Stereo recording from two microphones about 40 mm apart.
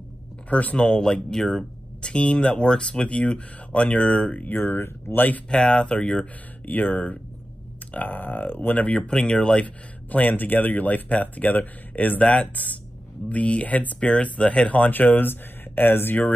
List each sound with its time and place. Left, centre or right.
0.5 s speech: left
0.7 s speech: left
4.5 s speech: left
4.7 s speech: left
5.5 s speech: centre
6.6 s speech: left
7.9 s speech: left
9.0 s speech: centre
10.1 s speech: left
12.2 s speech: left
13.9 s speech: left